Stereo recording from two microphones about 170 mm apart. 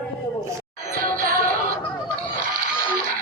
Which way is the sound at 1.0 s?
55° right (ahead or behind).